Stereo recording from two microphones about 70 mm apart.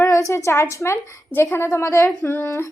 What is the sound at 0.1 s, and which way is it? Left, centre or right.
A woman's voice, left.